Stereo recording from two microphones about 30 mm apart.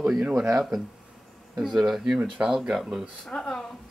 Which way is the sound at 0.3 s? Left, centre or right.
Centre.